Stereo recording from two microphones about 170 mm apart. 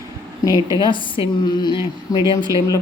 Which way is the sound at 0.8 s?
30° left (ahead or behind).